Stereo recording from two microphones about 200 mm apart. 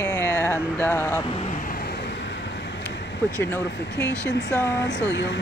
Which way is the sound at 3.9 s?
60° left (ahead or behind).